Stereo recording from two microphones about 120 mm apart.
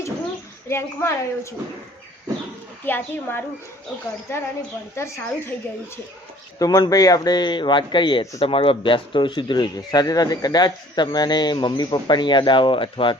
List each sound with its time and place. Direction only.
0.7 s a woman's voice: 20° left (ahead or behind)
2.8 s a woman's voice: 20° left (ahead or behind)
6.6 s speech: 30° left (ahead or behind)